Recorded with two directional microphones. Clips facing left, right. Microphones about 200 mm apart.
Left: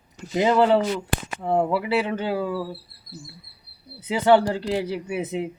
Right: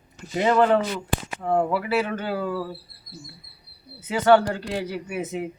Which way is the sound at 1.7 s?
20° left (ahead or behind).